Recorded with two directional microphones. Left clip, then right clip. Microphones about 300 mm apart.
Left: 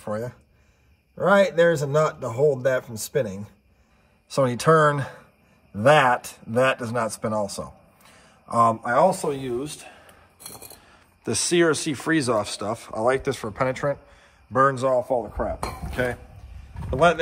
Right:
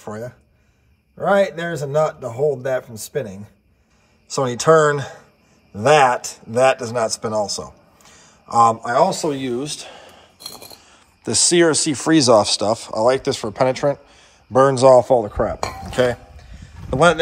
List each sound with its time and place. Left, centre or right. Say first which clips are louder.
0.0 s a man's voice: left 1 dB; centre
8.8 s a man's voice: right 3 dB; centre
10.8 s speech: right 4 dB; centre
15.2 s dishes: right 7 dB; right
16.9 s a man's voice: right 4 dB; centre